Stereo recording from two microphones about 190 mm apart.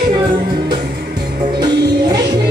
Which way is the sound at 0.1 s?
25° right (ahead or behind).